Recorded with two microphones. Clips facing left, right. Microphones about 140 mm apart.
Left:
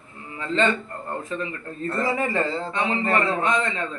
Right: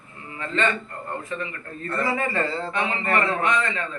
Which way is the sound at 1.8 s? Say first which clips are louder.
Left 1 dB; 25° left (ahead or behind).